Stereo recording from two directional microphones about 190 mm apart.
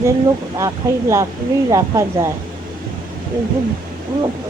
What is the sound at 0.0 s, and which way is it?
Speech, 15° right (ahead or behind).